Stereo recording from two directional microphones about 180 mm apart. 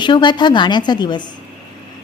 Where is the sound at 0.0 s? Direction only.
25° left (ahead or behind).